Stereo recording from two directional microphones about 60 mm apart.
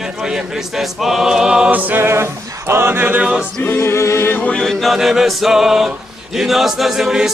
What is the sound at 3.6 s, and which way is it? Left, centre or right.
Music, left.